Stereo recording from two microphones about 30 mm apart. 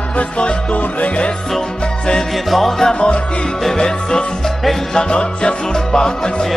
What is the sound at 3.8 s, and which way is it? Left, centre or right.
Music, left.